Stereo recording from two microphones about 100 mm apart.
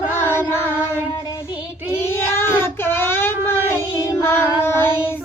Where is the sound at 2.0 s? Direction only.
25° left (ahead or behind).